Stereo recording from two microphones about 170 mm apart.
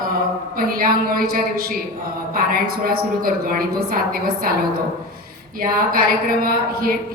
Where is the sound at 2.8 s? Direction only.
60° right (ahead or behind).